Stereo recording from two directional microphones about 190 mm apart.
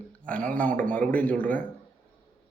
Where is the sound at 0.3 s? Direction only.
5° left (ahead or behind).